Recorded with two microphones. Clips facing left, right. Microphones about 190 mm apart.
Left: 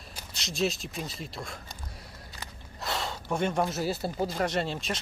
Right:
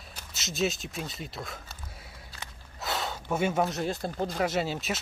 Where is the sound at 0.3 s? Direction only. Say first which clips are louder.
Even; centre (ahead or behind).